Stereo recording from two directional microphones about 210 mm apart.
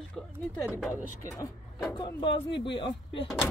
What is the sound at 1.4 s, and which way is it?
Speech, 15° left (ahead or behind).